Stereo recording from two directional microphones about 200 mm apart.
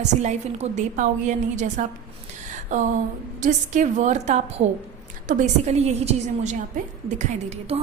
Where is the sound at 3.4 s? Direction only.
40° right (ahead or behind).